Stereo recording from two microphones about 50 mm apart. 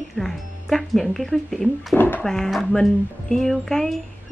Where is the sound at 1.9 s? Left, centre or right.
Left.